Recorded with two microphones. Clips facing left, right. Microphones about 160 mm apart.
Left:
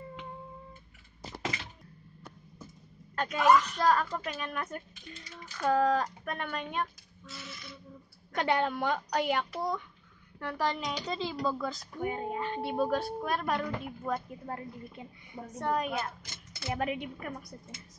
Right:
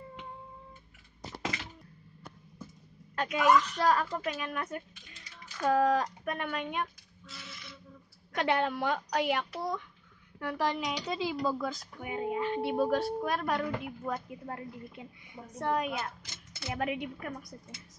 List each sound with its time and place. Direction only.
3.2 s speech: 5° right (ahead or behind)
8.4 s speech: centre (ahead or behind)